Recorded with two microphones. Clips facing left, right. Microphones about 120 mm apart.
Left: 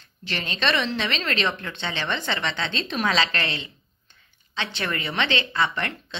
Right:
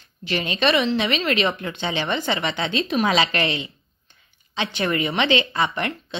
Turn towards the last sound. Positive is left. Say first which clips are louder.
# right 2 dB
turn(degrees=-15)  # may be behind; listen again after turning